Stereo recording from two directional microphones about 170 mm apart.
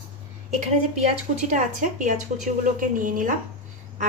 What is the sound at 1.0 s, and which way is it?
A woman's voice, 45° right (ahead or behind).